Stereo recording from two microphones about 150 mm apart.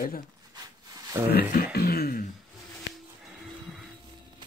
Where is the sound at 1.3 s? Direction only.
90° left.